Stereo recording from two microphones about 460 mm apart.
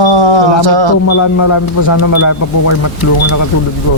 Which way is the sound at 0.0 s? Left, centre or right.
Right.